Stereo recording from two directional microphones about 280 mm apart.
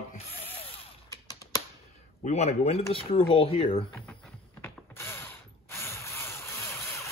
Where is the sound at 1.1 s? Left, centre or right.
Centre.